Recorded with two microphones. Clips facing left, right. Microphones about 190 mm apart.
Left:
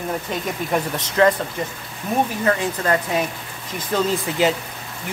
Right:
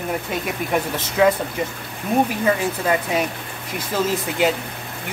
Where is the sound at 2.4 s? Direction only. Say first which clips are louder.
Right 1 dB; 10° right (ahead or behind).